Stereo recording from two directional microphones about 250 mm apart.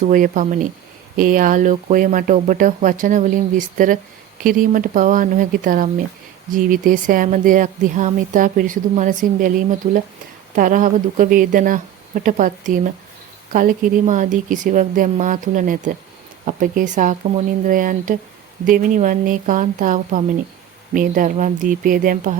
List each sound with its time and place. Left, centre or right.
0.0 s speech: right